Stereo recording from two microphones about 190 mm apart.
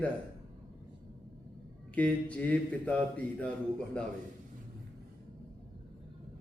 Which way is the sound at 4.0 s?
5° left (ahead or behind).